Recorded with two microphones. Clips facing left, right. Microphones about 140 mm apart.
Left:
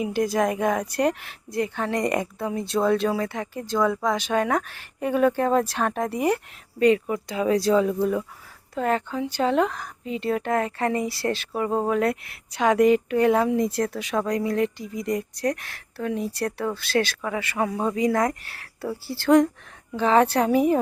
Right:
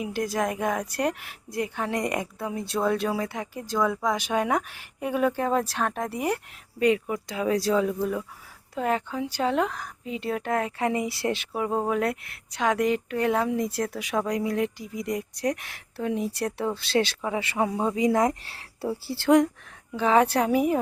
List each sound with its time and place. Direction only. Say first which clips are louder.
0.0 s speech: left 4 dB; centre (ahead or behind); by 11.4 s 20° right (ahead or behind)
11.5 s speech: left 4 dB; 5° right (ahead or behind)
18.4 s speech: right 1 dB; 30° right (ahead or behind)
19.9 s speech: left 2 dB; 5° right (ahead or behind)